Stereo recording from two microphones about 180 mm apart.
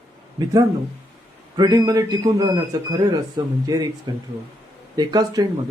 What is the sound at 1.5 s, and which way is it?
Speech, 20° right (ahead or behind).